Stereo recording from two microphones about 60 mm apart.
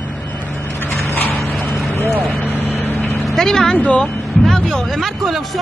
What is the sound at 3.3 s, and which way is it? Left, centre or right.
Speech, centre.